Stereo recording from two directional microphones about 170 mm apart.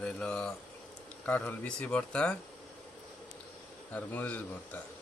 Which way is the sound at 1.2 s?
10° left (ahead or behind).